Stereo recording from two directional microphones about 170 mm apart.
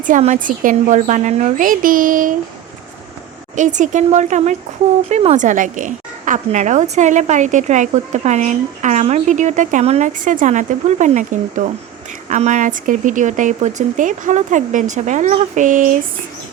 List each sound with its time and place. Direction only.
0.0 s a woman's voice: 45° right (ahead or behind)
3.5 s a woman's voice: 45° right (ahead or behind)